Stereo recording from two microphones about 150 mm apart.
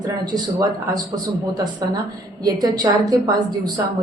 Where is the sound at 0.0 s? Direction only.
25° right (ahead or behind).